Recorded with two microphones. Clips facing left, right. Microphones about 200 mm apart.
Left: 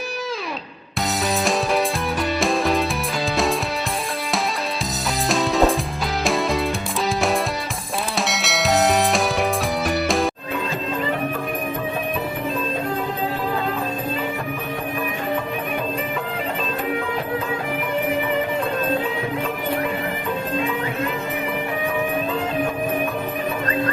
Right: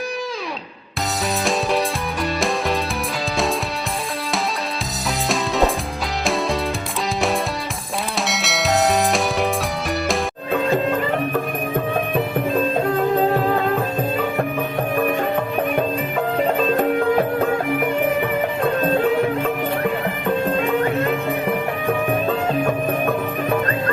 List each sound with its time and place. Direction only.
2.4 s music: centre (ahead or behind)
5.3 s music: centre (ahead or behind)
8.3 s music: centre (ahead or behind)
15.7 s music: 50° right (ahead or behind)
18.6 s music: 60° right (ahead or behind)